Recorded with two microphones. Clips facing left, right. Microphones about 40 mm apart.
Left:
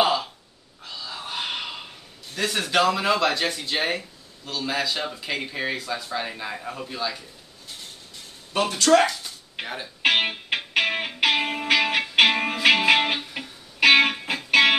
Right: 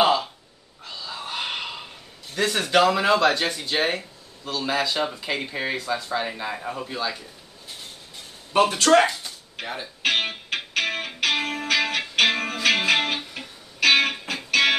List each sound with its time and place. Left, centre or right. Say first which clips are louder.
0.0 s gasp: right 2 dB; centre
0.8 s a sound: right 1 dB; centre
2.3 s speech: right 2 dB; centre
8.5 s speech: right 3 dB; right
9.6 s speech: even; left
10.0 s music: left 3 dB; centre